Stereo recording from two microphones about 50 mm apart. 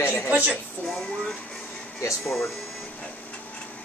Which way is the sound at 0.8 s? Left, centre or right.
Centre.